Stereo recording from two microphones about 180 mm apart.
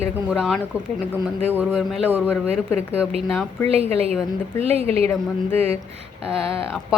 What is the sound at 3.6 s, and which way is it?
Speech, 35° right (ahead or behind).